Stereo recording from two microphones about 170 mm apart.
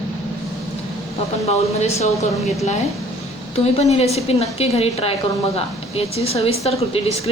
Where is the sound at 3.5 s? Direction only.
40° left (ahead or behind).